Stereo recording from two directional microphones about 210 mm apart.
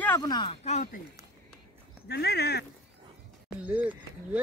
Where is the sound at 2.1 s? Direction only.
50° left (ahead or behind).